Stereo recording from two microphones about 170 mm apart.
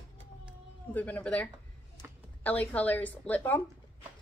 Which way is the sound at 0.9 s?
10° left (ahead or behind).